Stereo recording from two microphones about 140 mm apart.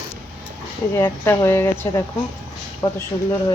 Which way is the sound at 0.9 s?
20° left (ahead or behind).